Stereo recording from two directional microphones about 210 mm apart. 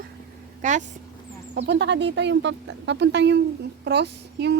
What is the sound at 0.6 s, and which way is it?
Speech, 35° right (ahead or behind).